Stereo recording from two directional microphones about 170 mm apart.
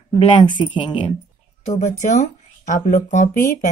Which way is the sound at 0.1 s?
30° left (ahead or behind).